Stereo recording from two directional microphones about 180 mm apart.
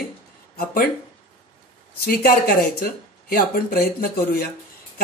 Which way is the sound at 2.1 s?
55° left (ahead or behind).